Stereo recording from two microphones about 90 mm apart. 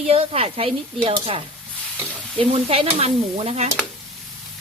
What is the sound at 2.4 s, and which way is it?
Speech, 90° right.